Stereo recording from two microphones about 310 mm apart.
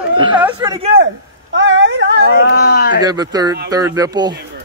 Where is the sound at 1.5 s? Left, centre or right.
Right.